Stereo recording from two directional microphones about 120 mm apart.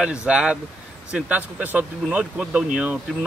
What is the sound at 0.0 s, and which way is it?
Speech, 10° right (ahead or behind).